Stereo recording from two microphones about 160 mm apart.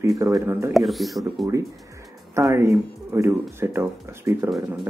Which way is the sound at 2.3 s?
15° right (ahead or behind).